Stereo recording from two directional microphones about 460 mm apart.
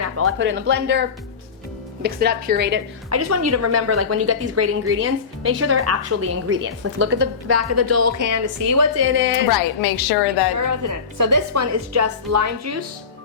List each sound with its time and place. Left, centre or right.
0.0 s a woman's voice: right
3.2 s a woman's voice: right
9.0 s a woman's voice: right
9.5 s a woman's voice: left
10.7 s a woman's voice: right